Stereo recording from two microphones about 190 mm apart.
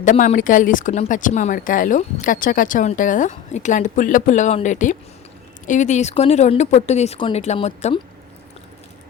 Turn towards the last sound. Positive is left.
turn(degrees=35)  # may be behind; listen again after turning